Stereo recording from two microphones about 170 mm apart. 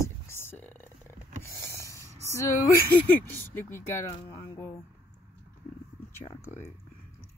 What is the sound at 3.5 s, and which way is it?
Speech, 15° left (ahead or behind).